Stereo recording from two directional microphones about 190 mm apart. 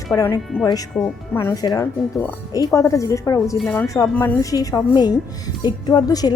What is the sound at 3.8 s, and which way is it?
A woman's voice, 15° left (ahead or behind).